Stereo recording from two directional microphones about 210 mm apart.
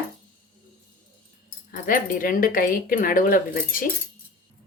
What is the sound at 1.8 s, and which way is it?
Speech, 40° left (ahead or behind).